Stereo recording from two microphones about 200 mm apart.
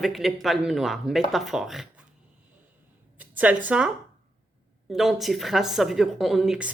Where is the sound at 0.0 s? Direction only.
Centre (ahead or behind).